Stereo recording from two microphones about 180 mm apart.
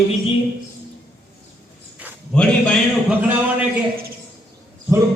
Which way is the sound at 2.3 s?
5° left (ahead or behind).